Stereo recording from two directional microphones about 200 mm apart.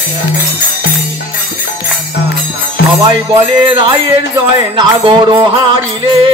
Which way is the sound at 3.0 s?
25° right (ahead or behind).